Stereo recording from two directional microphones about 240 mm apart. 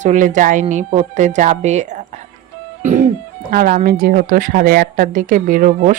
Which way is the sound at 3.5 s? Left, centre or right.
Right.